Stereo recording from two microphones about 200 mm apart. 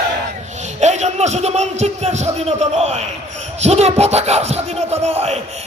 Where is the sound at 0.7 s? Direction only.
35° right (ahead or behind).